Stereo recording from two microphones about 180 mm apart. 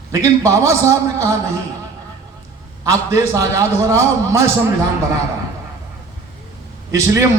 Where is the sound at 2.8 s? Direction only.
20° right (ahead or behind).